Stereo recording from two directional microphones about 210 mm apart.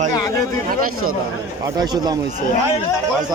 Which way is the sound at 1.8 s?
20° right (ahead or behind).